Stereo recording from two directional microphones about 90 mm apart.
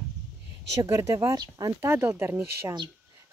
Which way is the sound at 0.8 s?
40° right (ahead or behind).